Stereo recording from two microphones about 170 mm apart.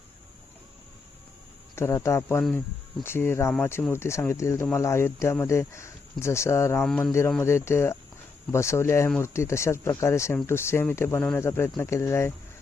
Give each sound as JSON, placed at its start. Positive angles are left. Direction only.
{"t": 1.7, "sound": "speech", "side_deg": 15}
{"t": 6.8, "sound": "speech", "side_deg": 5}
{"t": 9.0, "sound": "speech", "side_deg": 5}
{"t": 9.3, "sound": "speech", "side_deg": 15}